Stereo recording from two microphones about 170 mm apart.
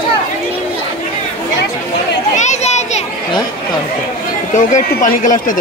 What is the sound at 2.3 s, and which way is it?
Children playing, 45° left (ahead or behind).